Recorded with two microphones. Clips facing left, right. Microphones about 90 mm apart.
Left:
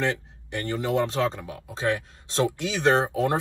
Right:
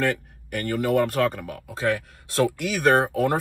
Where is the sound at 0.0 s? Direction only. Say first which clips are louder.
Right 2 dB; 20° left (ahead or behind).